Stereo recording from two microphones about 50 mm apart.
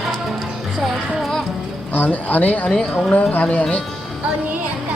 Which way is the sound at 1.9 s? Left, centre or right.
Left.